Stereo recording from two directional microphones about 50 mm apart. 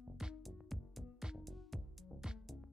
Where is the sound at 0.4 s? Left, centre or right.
Centre.